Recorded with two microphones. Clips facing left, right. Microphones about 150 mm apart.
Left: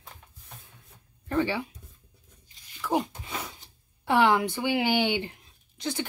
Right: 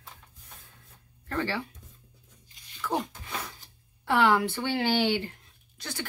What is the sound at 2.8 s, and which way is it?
Speech, 15° left (ahead or behind).